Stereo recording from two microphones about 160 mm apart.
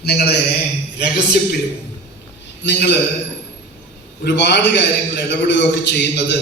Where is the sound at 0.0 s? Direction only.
90° left.